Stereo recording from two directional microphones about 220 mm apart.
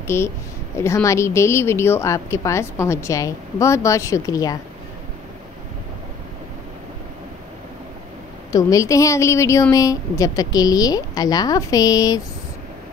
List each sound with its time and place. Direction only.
0.0 s a woman's voice: 10° left (ahead or behind)
8.5 s a woman's voice: 15° left (ahead or behind)